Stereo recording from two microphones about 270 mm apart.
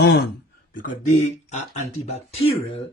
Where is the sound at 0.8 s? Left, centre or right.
Left.